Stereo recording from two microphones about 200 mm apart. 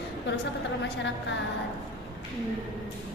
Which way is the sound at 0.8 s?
65° left (ahead or behind).